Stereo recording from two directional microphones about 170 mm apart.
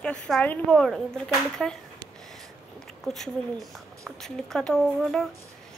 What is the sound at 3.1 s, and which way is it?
Speech, centre (ahead or behind).